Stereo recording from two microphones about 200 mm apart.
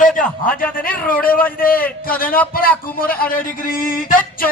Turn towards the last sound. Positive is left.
turn(degrees=45)  # may be behind; listen again after turning